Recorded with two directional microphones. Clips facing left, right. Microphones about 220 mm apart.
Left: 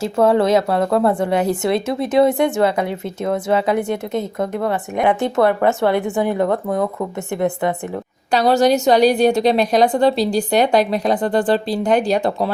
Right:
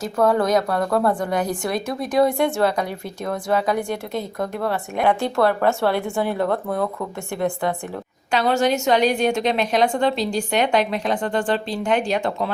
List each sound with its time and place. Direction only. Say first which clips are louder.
0.0 s speech: left 4 dB; 25° left (ahead or behind)
8.3 s a woman's voice: left 5 dB; 35° left (ahead or behind)